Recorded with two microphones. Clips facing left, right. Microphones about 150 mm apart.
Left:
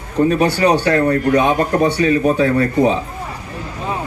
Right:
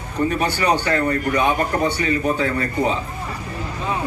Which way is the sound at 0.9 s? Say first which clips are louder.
Left 5 dB; 70° left (ahead or behind).